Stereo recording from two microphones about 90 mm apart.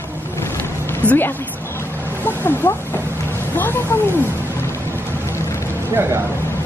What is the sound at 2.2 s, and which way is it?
Speech, 25° left (ahead or behind).